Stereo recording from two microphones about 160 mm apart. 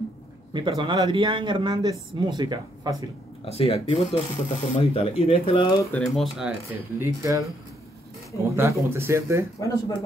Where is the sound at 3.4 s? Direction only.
40° left (ahead or behind).